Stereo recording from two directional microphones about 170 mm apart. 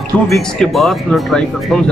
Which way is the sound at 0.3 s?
Centre (ahead or behind).